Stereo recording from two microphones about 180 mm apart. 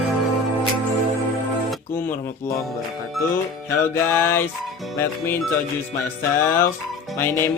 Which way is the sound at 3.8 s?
15° left (ahead or behind).